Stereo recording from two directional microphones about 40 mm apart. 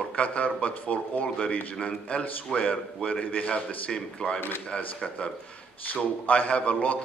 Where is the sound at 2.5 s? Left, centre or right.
Centre.